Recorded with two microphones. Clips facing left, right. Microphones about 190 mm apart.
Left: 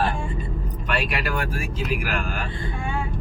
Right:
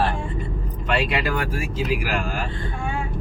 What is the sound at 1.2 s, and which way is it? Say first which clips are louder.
Speech: right 2 dB; 25° right (ahead or behind).